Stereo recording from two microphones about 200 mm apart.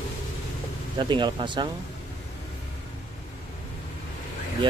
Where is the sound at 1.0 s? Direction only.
25° right (ahead or behind).